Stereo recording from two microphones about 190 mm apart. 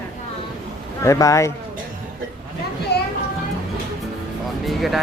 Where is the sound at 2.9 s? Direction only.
60° left (ahead or behind).